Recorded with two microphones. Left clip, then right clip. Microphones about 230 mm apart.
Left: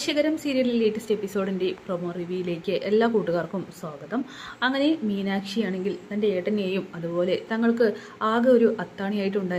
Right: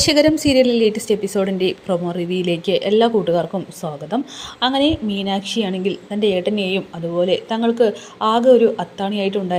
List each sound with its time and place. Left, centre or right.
0.0 s a woman's voice: right